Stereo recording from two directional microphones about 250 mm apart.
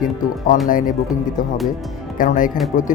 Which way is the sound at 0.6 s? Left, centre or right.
Left.